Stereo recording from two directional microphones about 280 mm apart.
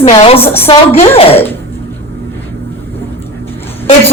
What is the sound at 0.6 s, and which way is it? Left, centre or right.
Speech, centre.